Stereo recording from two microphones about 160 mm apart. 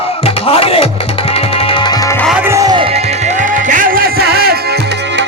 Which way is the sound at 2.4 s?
20° right (ahead or behind).